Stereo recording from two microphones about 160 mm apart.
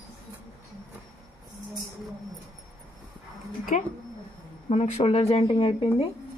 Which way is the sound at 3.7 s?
50° left (ahead or behind).